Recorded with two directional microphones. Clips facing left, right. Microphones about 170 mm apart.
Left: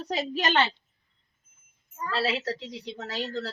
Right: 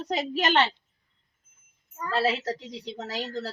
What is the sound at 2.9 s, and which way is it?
Speech, 40° right (ahead or behind).